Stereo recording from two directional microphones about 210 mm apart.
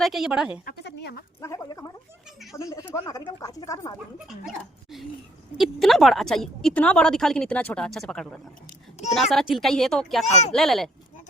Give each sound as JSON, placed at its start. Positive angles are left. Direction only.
{"t": 0.0, "sound": "a woman's voice", "side_deg": 0}
{"t": 0.6, "sound": "speech", "side_deg": 45}
{"t": 1.4, "sound": "speech", "side_deg": 15}
{"t": 4.3, "sound": "a woman's voice", "side_deg": 0}